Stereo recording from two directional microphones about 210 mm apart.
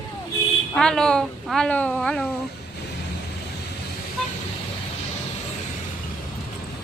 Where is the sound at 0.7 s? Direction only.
5° left (ahead or behind).